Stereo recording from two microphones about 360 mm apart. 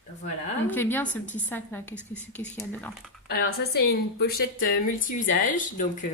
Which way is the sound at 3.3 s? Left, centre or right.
Left.